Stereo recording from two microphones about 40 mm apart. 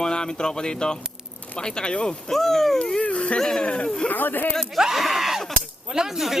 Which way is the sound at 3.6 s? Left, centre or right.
Left.